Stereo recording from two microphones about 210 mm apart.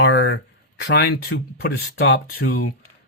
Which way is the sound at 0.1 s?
60° left (ahead or behind).